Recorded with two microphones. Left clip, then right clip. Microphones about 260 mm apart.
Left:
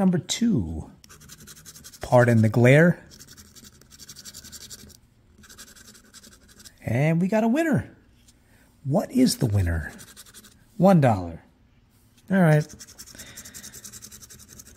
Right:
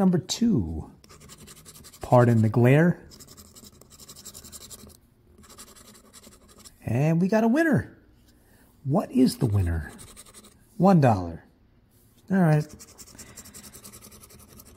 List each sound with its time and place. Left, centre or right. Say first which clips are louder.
0.0 s scratch: even; centre
2.0 s speech: left 2 dB; centre
3.1 s scratch: left 1 dB; left
6.6 s scratch: left 3 dB; centre
7.0 s speech: even; centre
8.9 s speech: left 1 dB; centre
10.8 s speech: left 1 dB; centre
12.3 s scratch: left 3 dB; centre